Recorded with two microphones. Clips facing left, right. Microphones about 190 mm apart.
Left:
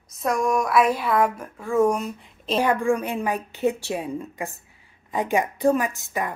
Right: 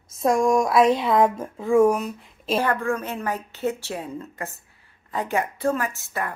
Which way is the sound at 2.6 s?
15° left (ahead or behind).